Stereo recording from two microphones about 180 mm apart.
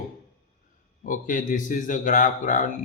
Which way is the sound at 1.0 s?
45° left (ahead or behind).